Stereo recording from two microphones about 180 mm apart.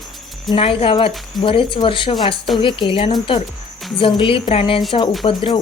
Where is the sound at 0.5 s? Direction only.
30° left (ahead or behind).